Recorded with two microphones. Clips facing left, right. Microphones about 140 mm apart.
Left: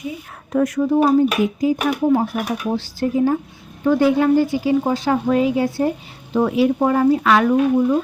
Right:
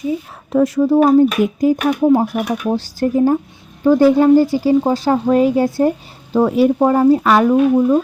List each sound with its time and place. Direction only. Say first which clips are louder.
0.5 s speech: right 4 dB; 30° right (ahead or behind)
1.6 s a woman's voice: right 5 dB; 40° right (ahead or behind)
7.4 s speech: right 3 dB; 20° right (ahead or behind)